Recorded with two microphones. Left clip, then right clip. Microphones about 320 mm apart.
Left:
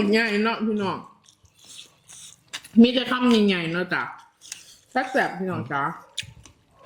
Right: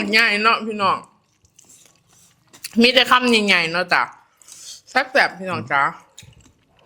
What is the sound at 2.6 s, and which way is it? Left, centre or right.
A woman's voice, right.